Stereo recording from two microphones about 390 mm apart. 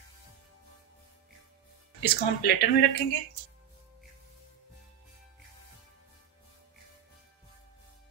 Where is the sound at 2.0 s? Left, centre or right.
Left.